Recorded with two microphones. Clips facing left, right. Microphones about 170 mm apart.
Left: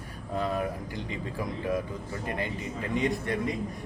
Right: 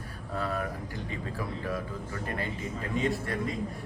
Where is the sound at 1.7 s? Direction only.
15° left (ahead or behind).